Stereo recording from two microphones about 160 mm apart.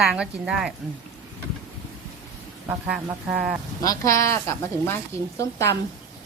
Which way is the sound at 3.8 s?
20° left (ahead or behind).